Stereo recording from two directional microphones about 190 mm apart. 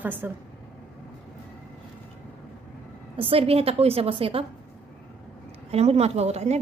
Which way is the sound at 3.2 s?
30° right (ahead or behind).